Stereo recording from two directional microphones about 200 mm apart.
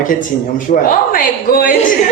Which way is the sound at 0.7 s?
45° left (ahead or behind).